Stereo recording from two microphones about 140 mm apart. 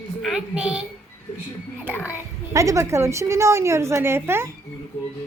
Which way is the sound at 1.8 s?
15° left (ahead or behind).